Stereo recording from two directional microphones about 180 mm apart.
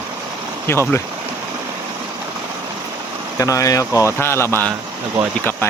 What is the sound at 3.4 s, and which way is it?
Speech, 15° left (ahead or behind).